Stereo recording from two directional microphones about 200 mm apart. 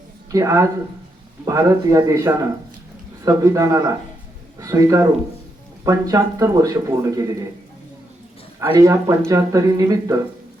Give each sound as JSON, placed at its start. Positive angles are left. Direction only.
{"t": 0.3, "sound": "speech", "side_deg": -15}
{"t": 8.6, "sound": "speech", "side_deg": -20}